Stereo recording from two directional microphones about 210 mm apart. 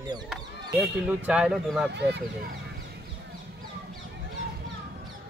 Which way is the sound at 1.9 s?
55° right (ahead or behind).